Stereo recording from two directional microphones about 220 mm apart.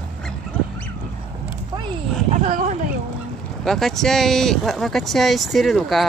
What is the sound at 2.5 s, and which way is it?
Speech, 35° right (ahead or behind).